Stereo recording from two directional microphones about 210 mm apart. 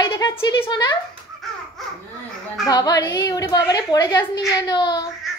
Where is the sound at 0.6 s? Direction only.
20° left (ahead or behind).